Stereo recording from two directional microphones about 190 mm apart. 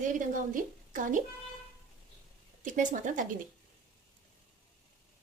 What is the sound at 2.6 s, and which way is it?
Speech, 45° right (ahead or behind).